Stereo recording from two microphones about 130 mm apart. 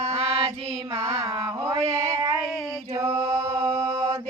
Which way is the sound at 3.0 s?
20° right (ahead or behind).